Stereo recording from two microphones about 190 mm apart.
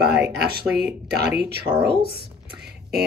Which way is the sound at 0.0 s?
60° right (ahead or behind).